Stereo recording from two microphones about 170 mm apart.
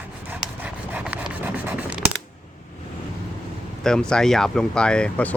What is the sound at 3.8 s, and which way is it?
Speech, 5° left (ahead or behind).